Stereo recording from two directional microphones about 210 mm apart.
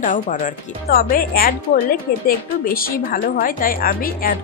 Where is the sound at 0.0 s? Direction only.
40° left (ahead or behind).